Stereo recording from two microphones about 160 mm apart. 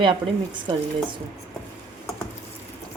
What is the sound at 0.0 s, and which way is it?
Speech, 30° right (ahead or behind).